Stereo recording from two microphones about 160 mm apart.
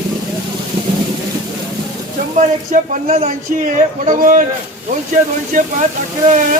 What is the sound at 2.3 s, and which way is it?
Speech, 55° right (ahead or behind).